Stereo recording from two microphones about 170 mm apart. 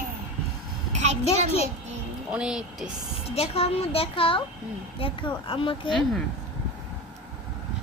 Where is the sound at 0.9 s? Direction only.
40° right (ahead or behind).